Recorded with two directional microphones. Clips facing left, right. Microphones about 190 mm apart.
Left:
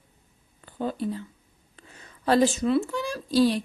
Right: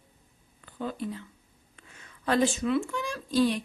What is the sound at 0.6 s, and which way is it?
Speech, 35° left (ahead or behind).